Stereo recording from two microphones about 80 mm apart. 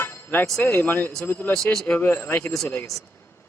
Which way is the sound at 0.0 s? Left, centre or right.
Left.